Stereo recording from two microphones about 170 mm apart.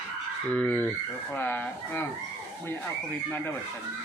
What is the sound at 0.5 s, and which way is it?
Speech, 5° left (ahead or behind).